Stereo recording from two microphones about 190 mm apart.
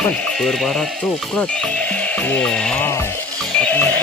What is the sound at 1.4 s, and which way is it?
Music, 5° left (ahead or behind).